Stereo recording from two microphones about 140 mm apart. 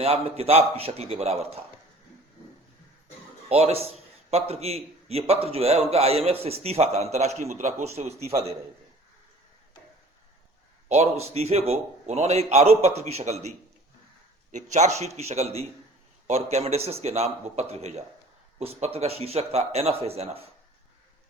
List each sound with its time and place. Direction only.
0.0 s a man's voice: 45° right (ahead or behind)
3.5 s a man's voice: 45° right (ahead or behind)
10.8 s a man's voice: 50° right (ahead or behind)
14.5 s a man's voice: 55° right (ahead or behind)